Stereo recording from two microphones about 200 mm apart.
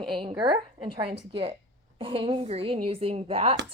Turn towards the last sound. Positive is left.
turn(degrees=-30)  # may be behind; listen again after turning